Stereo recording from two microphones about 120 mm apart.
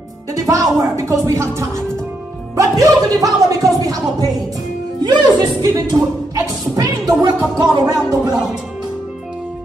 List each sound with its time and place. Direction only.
0.5 s speech: 25° right (ahead or behind)